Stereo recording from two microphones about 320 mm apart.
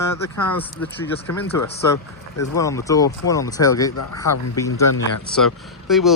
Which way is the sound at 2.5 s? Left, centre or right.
Centre.